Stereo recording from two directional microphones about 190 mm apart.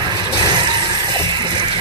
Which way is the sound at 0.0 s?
25° right (ahead or behind).